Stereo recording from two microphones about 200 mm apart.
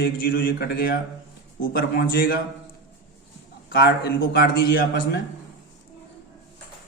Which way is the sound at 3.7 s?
55° left (ahead or behind).